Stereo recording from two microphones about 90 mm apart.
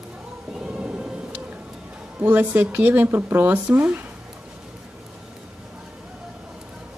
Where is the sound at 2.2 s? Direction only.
20° right (ahead or behind).